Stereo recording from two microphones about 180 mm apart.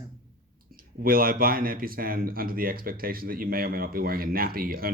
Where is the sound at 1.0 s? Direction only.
55° right (ahead or behind).